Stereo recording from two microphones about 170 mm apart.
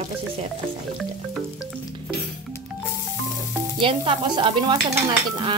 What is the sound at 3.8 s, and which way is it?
Stir, 30° right (ahead or behind).